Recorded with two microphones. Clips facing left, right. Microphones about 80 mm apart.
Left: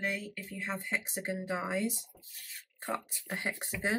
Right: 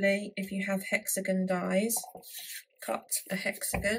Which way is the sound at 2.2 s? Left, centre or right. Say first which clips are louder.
Right 2 dB; right.